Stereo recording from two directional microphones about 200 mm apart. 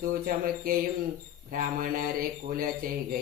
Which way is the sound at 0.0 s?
45° right (ahead or behind).